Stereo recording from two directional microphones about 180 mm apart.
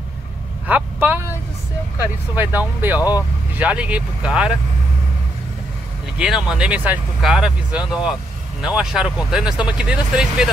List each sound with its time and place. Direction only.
0.7 s speech: 10° right (ahead or behind)
2.3 s speech: 10° right (ahead or behind)
3.0 s speech: 20° left (ahead or behind)
3.5 s speech: 5° right (ahead or behind)
6.1 s speech: 5° right (ahead or behind)